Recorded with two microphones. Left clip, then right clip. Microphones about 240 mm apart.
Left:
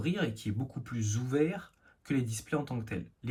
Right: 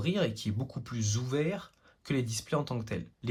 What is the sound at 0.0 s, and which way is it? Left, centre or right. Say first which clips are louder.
Speech: right 3 dB; centre.